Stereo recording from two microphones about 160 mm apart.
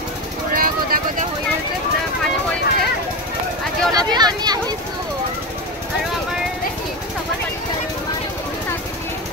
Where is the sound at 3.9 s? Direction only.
25° right (ahead or behind).